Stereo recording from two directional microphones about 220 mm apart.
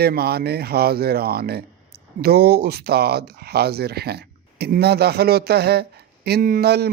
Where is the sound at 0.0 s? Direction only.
45° right (ahead or behind).